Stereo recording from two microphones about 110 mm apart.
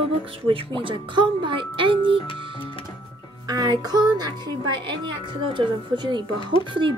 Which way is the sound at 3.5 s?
40° right (ahead or behind).